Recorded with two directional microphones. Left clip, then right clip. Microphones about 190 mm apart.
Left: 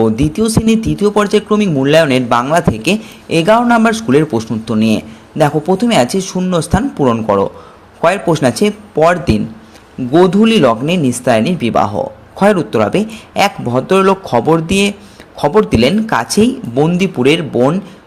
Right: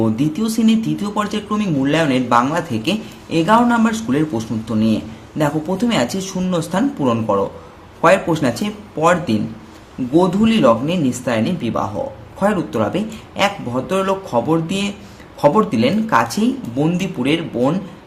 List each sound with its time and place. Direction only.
0.0 s speech: 35° left (ahead or behind)